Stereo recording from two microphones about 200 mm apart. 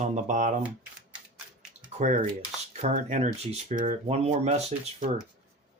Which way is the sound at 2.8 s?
35° right (ahead or behind).